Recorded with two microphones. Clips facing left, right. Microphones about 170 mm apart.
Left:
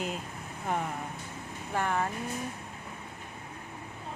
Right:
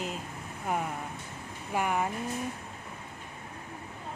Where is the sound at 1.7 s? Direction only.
10° right (ahead or behind).